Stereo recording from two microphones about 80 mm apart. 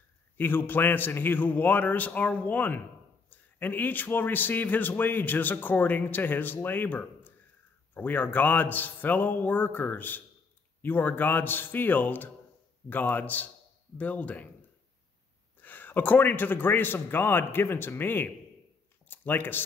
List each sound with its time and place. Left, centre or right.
0.4 s a man's voice: left
15.6 s a man's voice: left